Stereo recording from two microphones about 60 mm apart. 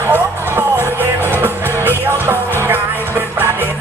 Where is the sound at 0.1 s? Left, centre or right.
Right.